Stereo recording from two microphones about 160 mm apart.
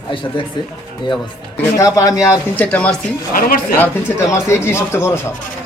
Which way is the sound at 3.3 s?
60° left (ahead or behind).